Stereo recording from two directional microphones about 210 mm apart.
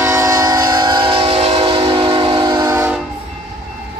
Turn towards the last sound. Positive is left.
turn(degrees=-10)  # may be behind; listen again after turning